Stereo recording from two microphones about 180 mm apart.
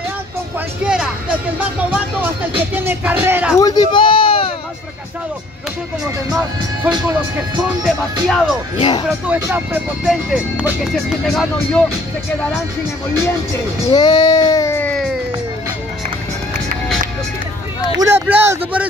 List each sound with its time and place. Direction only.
0.8 s music: 5° right (ahead or behind)
1.6 s speech: 10° right (ahead or behind)
3.5 s speech: 20° left (ahead or behind)
7.2 s speech: 5° right (ahead or behind)
8.7 s speech: 30° left (ahead or behind)
9.2 s speech: 10° right (ahead or behind)
13.9 s a sound: 25° left (ahead or behind); by 15.1 s 5° left (ahead or behind)
17.9 s speech: 15° right (ahead or behind)